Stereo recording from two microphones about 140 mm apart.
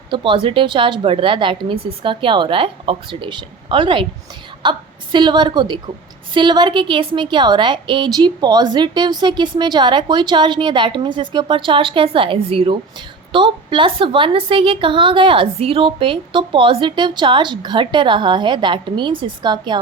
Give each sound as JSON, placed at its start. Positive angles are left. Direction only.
{"t": 0.1, "sound": "a woman's voice", "side_deg": -35}